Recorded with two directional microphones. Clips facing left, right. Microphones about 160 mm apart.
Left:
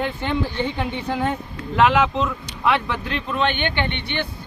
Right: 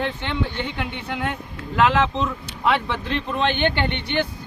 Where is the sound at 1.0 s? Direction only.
35° left (ahead or behind).